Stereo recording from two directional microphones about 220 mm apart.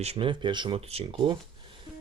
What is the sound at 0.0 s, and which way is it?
Speech, 25° right (ahead or behind).